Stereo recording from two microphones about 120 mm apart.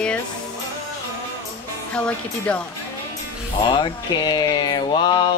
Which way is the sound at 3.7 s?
35° left (ahead or behind).